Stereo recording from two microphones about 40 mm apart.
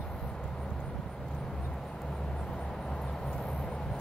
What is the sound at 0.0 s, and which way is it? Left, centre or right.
Vehicle, centre.